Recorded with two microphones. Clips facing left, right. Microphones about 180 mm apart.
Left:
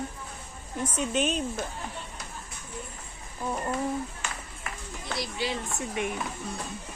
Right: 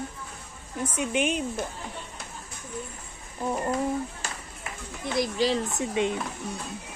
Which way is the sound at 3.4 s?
15° right (ahead or behind).